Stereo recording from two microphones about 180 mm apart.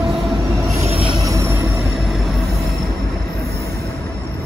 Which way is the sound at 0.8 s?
30° right (ahead or behind).